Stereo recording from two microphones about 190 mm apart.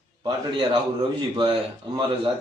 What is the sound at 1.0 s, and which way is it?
A man's voice, 25° right (ahead or behind).